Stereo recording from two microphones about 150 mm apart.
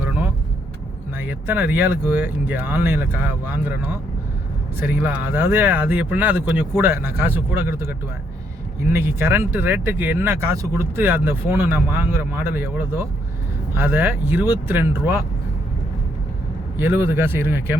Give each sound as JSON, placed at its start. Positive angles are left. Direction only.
{"t": 1.2, "sound": "speech", "side_deg": -15}
{"t": 8.9, "sound": "speech", "side_deg": -15}
{"t": 16.7, "sound": "speech", "side_deg": -15}